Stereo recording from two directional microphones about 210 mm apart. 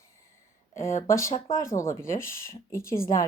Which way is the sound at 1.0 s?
15° left (ahead or behind).